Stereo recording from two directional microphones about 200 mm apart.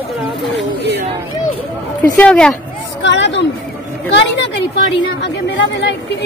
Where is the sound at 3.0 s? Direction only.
65° left (ahead or behind).